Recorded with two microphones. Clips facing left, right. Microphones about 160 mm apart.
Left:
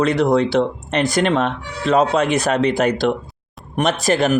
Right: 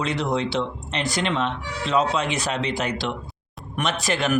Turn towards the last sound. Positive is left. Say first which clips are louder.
# left 7 dB
turn(degrees=40)  # may be behind; listen again after turning